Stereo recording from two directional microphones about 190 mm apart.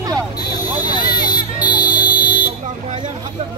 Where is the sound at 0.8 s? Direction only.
20° left (ahead or behind).